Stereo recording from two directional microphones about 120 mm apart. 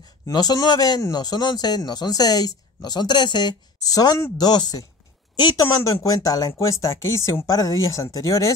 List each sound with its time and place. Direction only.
0.3 s speech: 35° left (ahead or behind)